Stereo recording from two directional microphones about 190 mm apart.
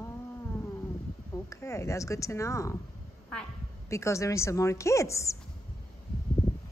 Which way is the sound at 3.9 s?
15° left (ahead or behind).